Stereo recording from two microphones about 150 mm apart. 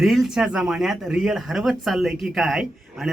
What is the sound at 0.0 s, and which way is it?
Speech, centre (ahead or behind).